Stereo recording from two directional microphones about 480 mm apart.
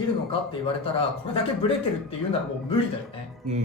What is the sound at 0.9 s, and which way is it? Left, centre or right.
Speech, centre.